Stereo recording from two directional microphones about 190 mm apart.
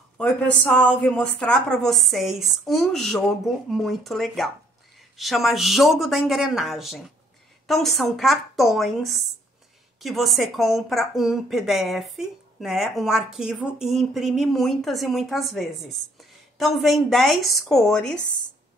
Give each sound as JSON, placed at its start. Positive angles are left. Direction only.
{"t": 0.2, "sound": "a woman's voice", "side_deg": 5}